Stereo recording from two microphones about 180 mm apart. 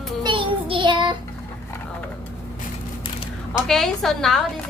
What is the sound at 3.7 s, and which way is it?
Speech, centre (ahead or behind).